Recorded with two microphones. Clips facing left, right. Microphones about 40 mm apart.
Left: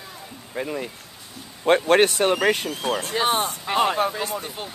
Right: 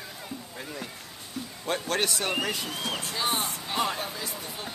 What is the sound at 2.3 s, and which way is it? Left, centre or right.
Speech, left.